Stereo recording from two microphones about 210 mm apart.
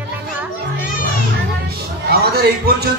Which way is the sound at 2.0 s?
50° right (ahead or behind).